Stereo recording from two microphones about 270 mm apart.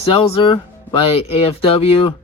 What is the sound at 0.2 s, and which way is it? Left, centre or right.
Speech, centre.